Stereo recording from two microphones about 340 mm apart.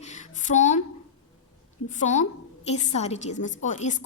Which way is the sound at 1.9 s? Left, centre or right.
Left.